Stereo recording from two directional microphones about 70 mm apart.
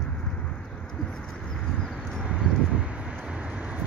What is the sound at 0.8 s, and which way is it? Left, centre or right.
Pigeon, centre.